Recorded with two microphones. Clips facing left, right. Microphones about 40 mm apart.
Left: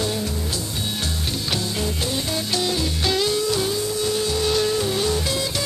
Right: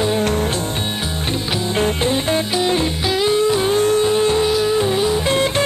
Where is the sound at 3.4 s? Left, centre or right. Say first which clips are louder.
Right 6 dB; right.